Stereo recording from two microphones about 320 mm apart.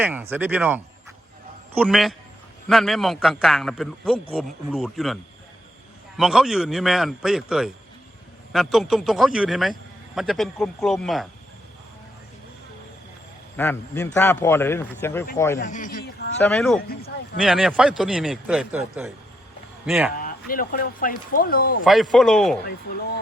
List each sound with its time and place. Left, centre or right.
0.0 s a man's voice: centre
13.6 s speech: centre
15.5 s a man's voice: left
16.4 s a man's voice: centre
20.1 s speech: left
21.8 s a man's voice: centre